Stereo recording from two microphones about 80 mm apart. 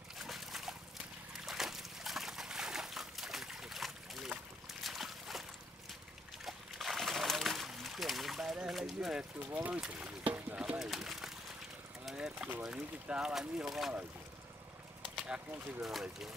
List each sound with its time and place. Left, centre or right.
0.2 s dog: centre
1.3 s trickle: centre
4.8 s a sound: centre
6.4 s a sound: centre
9.4 s speech: right
9.8 s speech: centre
10.8 s speech: centre
12.1 s a sound: centre
12.6 s speech: centre
15.2 s speech: centre